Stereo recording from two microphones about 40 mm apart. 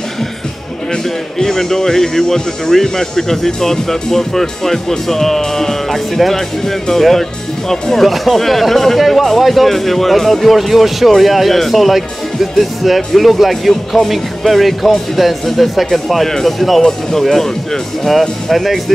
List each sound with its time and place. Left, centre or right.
1.0 s speech: centre
18.5 s speech: centre